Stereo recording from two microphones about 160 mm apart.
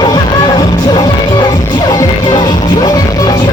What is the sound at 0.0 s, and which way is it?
Music, 25° left (ahead or behind).